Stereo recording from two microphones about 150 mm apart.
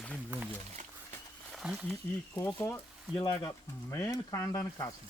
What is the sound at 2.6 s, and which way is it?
Speech, 15° left (ahead or behind).